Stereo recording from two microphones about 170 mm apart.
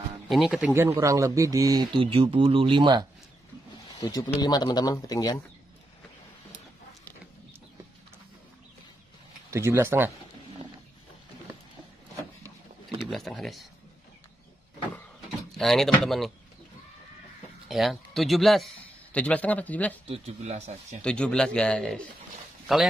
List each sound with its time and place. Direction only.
0.3 s speech: 5° right (ahead or behind)
0.7 s speech: 15° right (ahead or behind)
3.9 s speech: 20° left (ahead or behind)
9.5 s speech: 15° right (ahead or behind)
13.0 s speech: centre (ahead or behind)
15.5 s speech: centre (ahead or behind)
17.6 s speech: centre (ahead or behind)
20.1 s a man's voice: 40° right (ahead or behind)
21.0 s speech: 5° left (ahead or behind)